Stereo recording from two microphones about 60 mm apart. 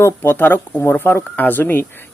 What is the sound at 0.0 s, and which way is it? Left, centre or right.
Speech, left.